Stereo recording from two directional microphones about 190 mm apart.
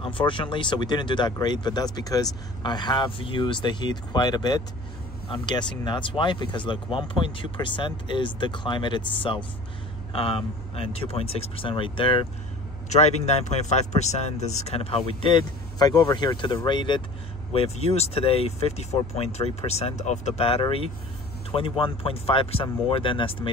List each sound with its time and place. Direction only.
0.0 s speech: 25° left (ahead or behind)